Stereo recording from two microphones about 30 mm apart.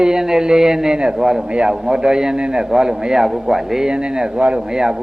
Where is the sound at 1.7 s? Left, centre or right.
Centre.